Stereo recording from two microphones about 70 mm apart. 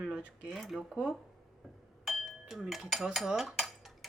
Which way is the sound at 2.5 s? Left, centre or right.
Centre.